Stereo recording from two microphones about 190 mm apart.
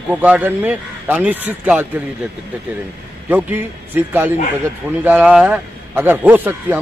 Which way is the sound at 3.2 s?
10° right (ahead or behind).